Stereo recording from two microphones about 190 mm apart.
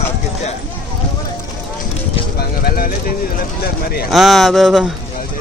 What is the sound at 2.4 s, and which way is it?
Clip-clop, 50° left (ahead or behind).